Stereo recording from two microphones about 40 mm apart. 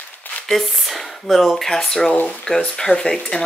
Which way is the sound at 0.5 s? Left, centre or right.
Centre.